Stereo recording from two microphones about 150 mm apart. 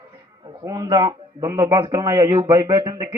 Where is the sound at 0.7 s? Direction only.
25° right (ahead or behind).